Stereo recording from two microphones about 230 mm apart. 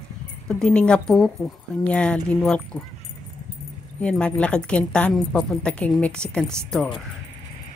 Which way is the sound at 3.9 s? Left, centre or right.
Centre.